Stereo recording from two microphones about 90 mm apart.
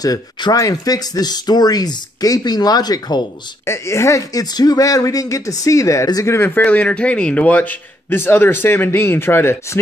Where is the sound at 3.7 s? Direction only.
30° left (ahead or behind).